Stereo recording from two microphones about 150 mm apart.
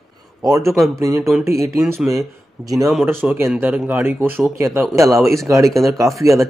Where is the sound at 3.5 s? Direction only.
10° right (ahead or behind).